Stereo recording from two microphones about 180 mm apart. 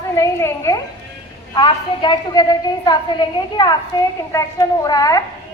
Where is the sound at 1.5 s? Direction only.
25° left (ahead or behind).